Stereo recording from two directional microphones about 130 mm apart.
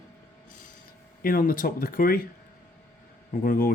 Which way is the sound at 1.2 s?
90° left.